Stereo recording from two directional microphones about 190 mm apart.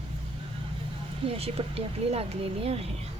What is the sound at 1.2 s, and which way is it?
Speech, 30° right (ahead or behind).